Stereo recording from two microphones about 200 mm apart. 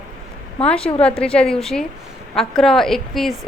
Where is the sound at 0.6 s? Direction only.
5° left (ahead or behind).